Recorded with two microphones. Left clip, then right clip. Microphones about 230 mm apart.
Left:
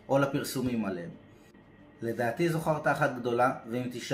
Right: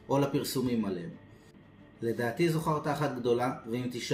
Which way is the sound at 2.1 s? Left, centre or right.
Centre.